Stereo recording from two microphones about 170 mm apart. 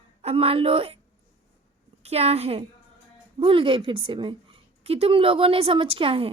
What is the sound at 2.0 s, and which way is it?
A woman's voice, 35° right (ahead or behind).